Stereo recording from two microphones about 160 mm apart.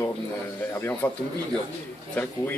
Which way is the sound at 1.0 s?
10° left (ahead or behind).